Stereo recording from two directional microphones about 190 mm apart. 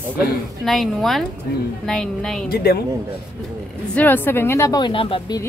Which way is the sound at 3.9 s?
10° left (ahead or behind).